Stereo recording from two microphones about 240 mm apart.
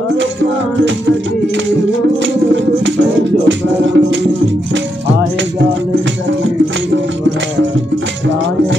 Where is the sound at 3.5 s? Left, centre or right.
Right.